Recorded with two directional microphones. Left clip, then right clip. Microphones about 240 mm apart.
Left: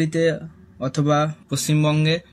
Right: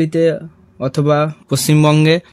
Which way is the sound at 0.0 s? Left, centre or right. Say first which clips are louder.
Right 6 dB; right.